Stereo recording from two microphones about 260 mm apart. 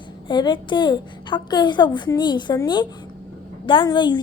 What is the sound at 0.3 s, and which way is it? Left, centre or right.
A woman's voice, centre.